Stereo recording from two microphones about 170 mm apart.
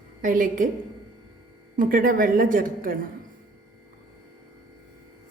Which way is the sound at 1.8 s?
55° right (ahead or behind).